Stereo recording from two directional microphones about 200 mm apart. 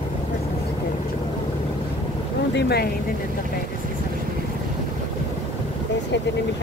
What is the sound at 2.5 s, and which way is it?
Speech, 55° left (ahead or behind).